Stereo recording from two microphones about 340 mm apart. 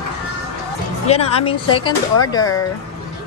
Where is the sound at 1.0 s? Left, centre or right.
Centre.